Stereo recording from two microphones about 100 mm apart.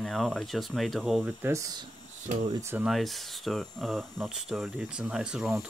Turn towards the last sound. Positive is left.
turn(degrees=-5)  # may be behind; listen again after turning